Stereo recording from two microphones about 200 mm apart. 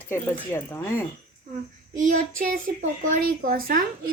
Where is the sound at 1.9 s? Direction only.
40° right (ahead or behind).